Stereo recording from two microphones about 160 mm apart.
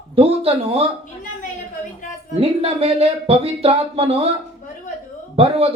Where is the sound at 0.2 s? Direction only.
40° right (ahead or behind).